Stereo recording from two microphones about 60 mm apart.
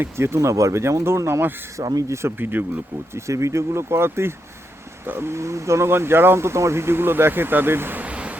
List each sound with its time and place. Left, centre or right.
0.0 s speech: right
0.3 s speech: right
1.8 s speech: right
2.4 s speech: right
3.2 s speech: right
5.3 s speech: right
8.0 s a sound: right